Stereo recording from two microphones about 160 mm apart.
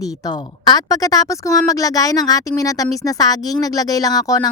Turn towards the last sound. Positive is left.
turn(degrees=20)  # may be behind; listen again after turning